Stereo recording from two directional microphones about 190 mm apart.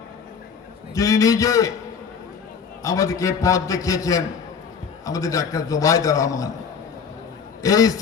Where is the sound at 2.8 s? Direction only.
15° left (ahead or behind).